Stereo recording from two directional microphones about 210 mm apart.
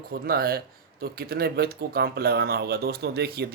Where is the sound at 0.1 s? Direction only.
45° right (ahead or behind).